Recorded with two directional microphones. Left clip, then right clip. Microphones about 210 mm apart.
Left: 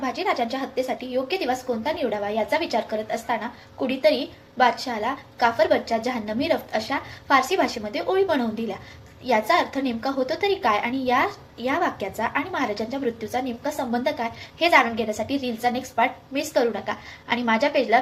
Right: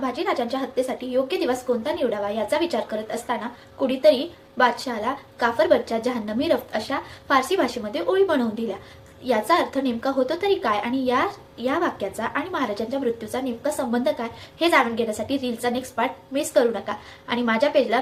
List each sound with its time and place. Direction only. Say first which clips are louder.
0.0 s a woman's voice: even; 15° right (ahead or behind)